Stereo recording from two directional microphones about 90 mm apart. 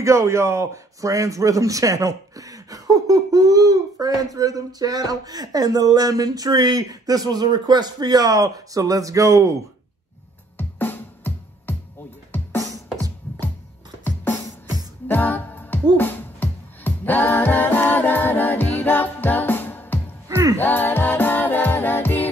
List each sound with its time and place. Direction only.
0.0 s a man's voice: 35° right (ahead or behind)
10.6 s music: 20° left (ahead or behind)
14.0 s music: 20° left (ahead or behind)
20.2 s music: 35° right (ahead or behind)
20.5 s music: 20° left (ahead or behind)